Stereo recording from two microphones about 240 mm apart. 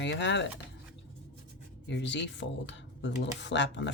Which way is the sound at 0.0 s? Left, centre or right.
Left.